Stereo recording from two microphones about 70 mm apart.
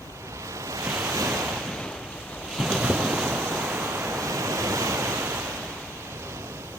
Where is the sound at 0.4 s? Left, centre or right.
Right.